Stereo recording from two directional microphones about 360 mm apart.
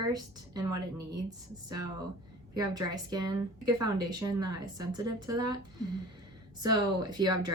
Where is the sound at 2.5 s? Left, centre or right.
Centre.